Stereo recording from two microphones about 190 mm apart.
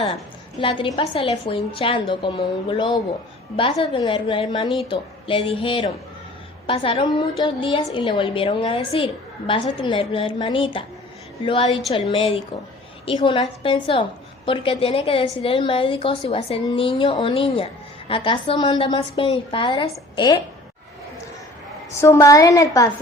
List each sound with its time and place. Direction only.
0.6 s a woman's voice: 25° left (ahead or behind)
22.0 s a woman's voice: 15° left (ahead or behind)